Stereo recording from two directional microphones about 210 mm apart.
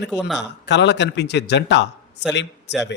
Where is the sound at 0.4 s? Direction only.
55° left (ahead or behind).